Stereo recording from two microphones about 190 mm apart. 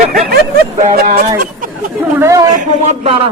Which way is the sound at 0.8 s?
45° right (ahead or behind).